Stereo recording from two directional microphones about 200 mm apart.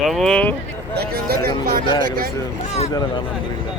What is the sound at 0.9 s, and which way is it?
Speech, 50° right (ahead or behind).